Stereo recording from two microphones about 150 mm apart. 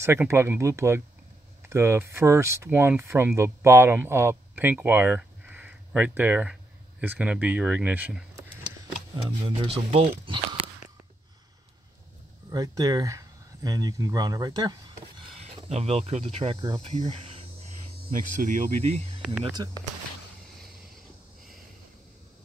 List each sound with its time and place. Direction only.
0.0 s speech: 15° right (ahead or behind)
9.1 s speech: 35° right (ahead or behind)
12.4 s speech: 25° right (ahead or behind)
15.4 s speech: 45° right (ahead or behind)
18.0 s hum: 60° right (ahead or behind)
19.6 s speech: 25° right (ahead or behind)